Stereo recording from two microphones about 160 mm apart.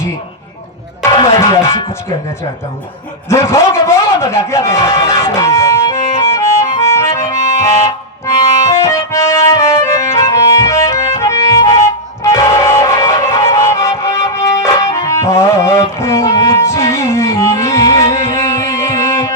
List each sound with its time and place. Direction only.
1.0 s music: 20° left (ahead or behind)
3.2 s a man's voice: 15° left (ahead or behind)
5.0 s music: 15° left (ahead or behind)